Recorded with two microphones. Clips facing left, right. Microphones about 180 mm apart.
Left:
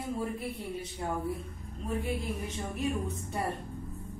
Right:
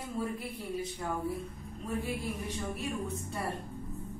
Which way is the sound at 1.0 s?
25° left (ahead or behind).